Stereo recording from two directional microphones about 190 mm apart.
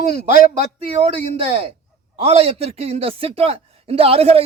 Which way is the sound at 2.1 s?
30° right (ahead or behind).